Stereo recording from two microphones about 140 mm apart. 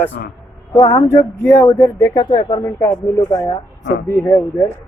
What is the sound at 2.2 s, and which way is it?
Speech, 35° left (ahead or behind).